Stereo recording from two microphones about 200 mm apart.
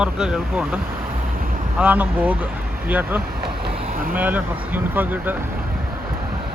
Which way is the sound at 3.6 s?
45° right (ahead or behind).